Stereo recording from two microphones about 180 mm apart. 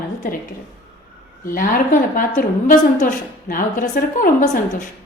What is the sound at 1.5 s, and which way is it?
A woman's voice, 50° left (ahead or behind).